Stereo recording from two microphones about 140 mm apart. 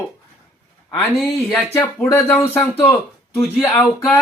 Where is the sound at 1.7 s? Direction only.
15° left (ahead or behind).